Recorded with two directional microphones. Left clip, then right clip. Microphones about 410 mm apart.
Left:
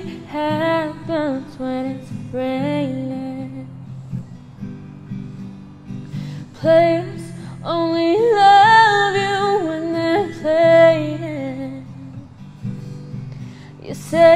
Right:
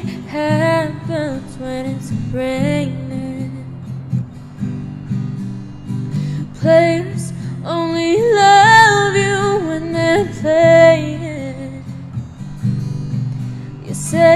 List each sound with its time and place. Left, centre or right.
0.0 s music: left
6.6 s music: left
13.8 s music: left